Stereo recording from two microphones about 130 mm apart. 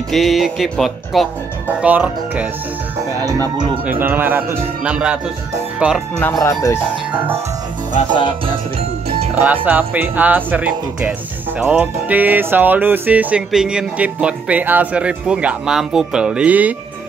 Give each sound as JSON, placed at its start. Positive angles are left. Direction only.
{"t": 0.1, "sound": "speech", "side_deg": 0}
{"t": 1.8, "sound": "music", "side_deg": -10}
{"t": 3.8, "sound": "music", "side_deg": -15}
{"t": 5.8, "sound": "speech", "side_deg": -5}
{"t": 6.4, "sound": "speech", "side_deg": 20}
{"t": 6.8, "sound": "music", "side_deg": -10}
{"t": 9.7, "sound": "music", "side_deg": -15}